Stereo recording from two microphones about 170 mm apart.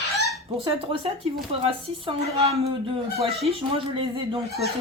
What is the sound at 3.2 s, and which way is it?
Speech, 35° right (ahead or behind).